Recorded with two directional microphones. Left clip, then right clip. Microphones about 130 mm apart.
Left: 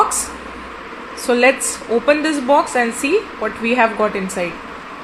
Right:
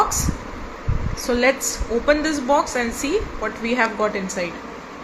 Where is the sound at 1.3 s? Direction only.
55° left (ahead or behind).